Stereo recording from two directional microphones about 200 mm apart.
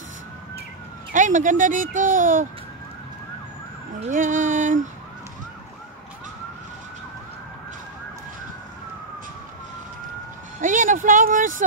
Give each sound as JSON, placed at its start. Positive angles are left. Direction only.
{"t": 1.1, "sound": "speech", "side_deg": -40}
{"t": 4.1, "sound": "speech", "side_deg": -40}
{"t": 10.6, "sound": "speech", "side_deg": -40}